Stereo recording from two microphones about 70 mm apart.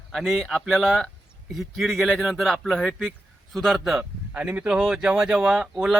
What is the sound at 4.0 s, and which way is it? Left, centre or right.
Speech, right.